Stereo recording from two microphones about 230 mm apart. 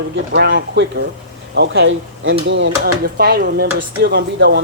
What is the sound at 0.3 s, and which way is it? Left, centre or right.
Speech, right.